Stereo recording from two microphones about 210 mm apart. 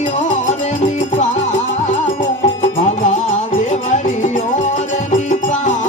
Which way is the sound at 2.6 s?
35° left (ahead or behind).